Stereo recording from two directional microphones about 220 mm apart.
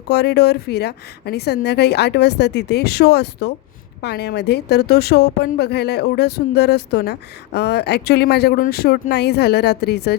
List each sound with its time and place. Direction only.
0.1 s a woman's voice: 50° left (ahead or behind)